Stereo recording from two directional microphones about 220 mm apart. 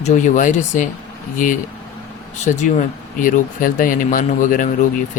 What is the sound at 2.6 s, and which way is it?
Speech, 35° left (ahead or behind).